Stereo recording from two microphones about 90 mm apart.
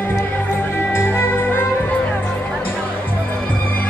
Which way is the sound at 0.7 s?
25° left (ahead or behind).